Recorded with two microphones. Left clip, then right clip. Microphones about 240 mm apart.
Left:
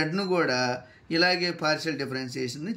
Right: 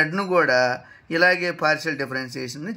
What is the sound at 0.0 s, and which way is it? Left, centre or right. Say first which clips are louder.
A man's voice: right 6 dB; centre.